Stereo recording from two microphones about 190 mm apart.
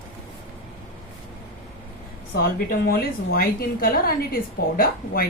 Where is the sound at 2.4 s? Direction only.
55° left (ahead or behind).